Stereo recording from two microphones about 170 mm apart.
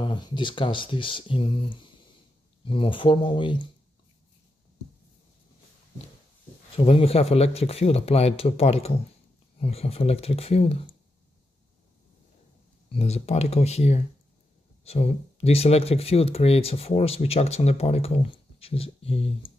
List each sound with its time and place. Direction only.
0.0 s speech: 30° left (ahead or behind)
6.8 s speech: 35° left (ahead or behind)
12.9 s speech: 40° left (ahead or behind)